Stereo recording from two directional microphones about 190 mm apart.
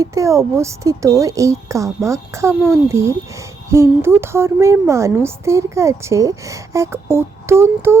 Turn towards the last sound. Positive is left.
turn(degrees=-15)  # may be behind; listen again after turning